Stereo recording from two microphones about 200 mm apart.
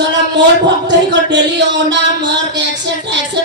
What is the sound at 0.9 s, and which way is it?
Speech, 60° right (ahead or behind).